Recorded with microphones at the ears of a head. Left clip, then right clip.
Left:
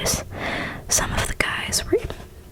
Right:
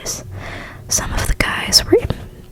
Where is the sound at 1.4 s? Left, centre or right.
Right.